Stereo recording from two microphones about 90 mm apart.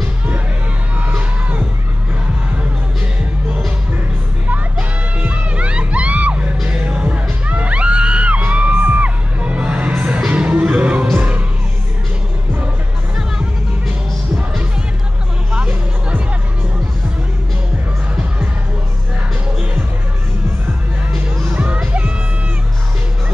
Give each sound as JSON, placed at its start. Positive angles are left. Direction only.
{"t": 4.5, "sound": "music", "side_deg": -15}
{"t": 13.1, "sound": "music", "side_deg": -10}
{"t": 15.5, "sound": "music", "side_deg": -15}
{"t": 21.5, "sound": "music", "side_deg": -15}